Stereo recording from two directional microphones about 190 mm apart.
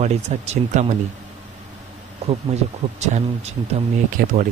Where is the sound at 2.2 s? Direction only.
35° right (ahead or behind).